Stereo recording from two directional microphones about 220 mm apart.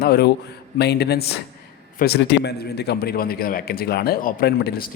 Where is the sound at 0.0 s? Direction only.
45° left (ahead or behind).